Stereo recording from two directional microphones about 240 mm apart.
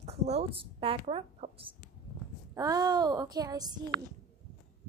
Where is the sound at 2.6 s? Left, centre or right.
Centre.